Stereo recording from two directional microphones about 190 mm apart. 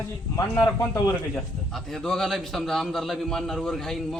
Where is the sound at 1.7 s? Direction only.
Centre (ahead or behind).